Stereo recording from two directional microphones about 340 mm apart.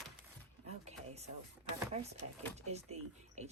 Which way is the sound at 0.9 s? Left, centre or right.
Centre.